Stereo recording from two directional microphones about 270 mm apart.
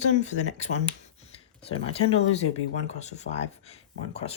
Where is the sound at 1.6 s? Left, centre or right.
Left.